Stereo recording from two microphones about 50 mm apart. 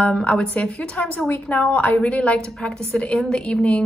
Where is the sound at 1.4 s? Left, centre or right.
Left.